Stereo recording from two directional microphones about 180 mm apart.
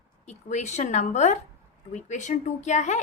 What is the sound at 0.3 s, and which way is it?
Speech, 40° left (ahead or behind).